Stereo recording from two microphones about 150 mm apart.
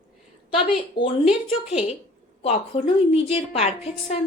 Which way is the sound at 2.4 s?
45° left (ahead or behind).